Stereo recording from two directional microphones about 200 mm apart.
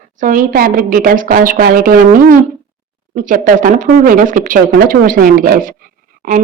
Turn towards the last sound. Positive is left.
turn(degrees=-40)  # may be behind; listen again after turning